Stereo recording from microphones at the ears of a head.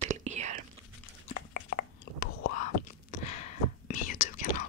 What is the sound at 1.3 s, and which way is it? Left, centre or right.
Chewing, left.